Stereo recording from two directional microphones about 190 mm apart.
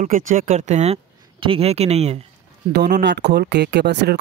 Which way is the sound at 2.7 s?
60° right (ahead or behind).